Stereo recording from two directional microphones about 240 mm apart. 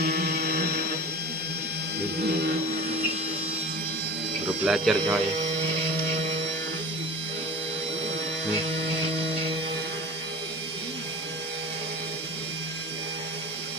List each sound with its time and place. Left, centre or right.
0.0 s music: right
4.4 s speech: centre